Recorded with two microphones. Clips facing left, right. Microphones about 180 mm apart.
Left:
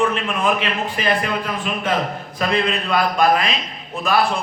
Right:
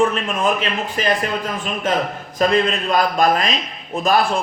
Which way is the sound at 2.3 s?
45° right (ahead or behind).